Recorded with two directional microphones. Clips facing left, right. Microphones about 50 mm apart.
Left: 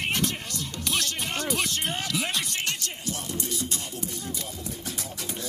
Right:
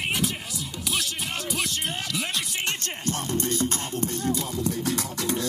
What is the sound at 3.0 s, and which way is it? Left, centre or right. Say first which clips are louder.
Music: right 6 dB; right.